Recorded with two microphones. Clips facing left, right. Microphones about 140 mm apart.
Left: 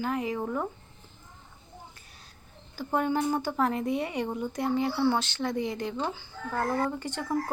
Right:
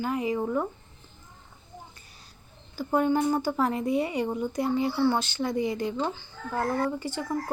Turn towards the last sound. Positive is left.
turn(degrees=-5)  # may be behind; listen again after turning